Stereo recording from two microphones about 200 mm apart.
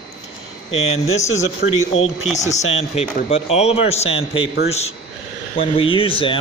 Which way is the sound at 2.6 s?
30° left (ahead or behind).